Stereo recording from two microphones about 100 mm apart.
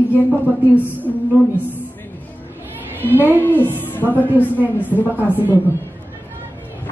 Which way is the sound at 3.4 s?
20° left (ahead or behind).